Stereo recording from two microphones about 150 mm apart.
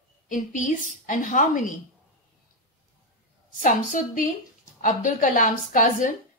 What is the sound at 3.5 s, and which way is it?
A woman's voice, 60° left (ahead or behind).